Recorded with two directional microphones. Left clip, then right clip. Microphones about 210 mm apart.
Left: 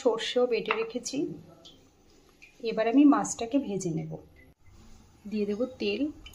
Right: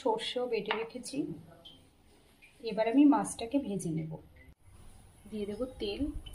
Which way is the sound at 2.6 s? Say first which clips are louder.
Left 4 dB; 20° left (ahead or behind).